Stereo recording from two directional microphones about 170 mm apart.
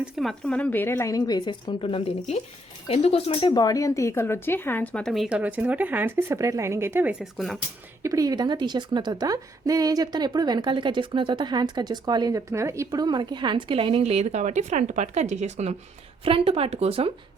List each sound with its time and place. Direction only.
0.0 s speech: centre (ahead or behind)
8.0 s a woman's voice: 20° right (ahead or behind); by 17.1 s 35° right (ahead or behind)